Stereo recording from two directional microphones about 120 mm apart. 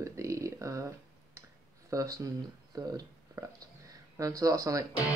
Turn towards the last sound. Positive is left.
turn(degrees=-30)  # may be behind; listen again after turning